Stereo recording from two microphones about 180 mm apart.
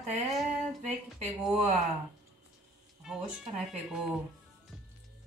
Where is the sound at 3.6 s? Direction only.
5° right (ahead or behind).